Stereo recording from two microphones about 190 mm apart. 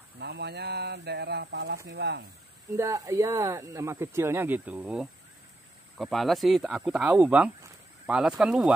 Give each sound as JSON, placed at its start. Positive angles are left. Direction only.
{"t": 0.2, "sound": "speech", "side_deg": -60}
{"t": 2.7, "sound": "speech", "side_deg": -15}